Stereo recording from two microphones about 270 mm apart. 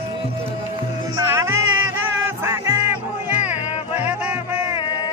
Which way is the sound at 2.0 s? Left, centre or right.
Centre.